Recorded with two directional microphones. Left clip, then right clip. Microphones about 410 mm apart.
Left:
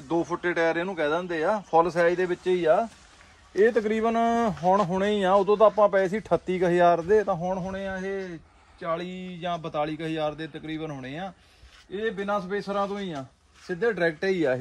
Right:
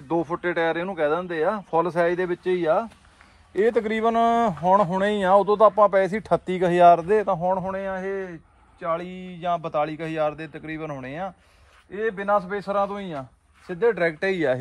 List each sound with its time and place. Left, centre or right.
0.1 s a man's voice: centre
12.6 s a man's voice: centre
13.7 s speech: centre